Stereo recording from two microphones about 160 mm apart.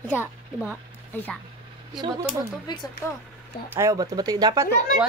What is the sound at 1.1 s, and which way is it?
Speech, 10° left (ahead or behind).